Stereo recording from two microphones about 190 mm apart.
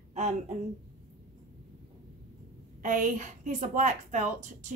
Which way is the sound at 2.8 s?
40° right (ahead or behind).